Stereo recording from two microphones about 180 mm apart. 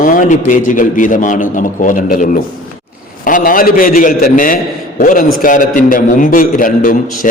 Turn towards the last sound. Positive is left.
turn(degrees=50)  # may be behind; listen again after turning